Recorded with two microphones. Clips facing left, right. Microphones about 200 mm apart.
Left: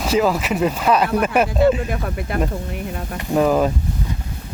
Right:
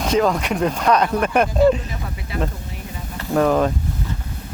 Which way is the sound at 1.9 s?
55° left (ahead or behind).